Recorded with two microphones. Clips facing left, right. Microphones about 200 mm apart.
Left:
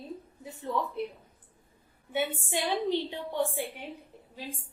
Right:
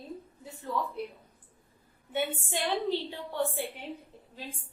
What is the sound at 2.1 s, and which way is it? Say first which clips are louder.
A woman's voice: left 1 dB; 15° left (ahead or behind).